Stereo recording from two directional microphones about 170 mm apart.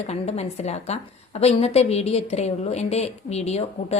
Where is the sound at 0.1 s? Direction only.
40° left (ahead or behind).